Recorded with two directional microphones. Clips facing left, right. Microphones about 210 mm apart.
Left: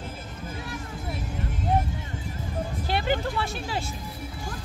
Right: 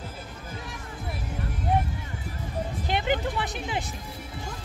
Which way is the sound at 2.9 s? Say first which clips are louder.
Even; 20° right (ahead or behind).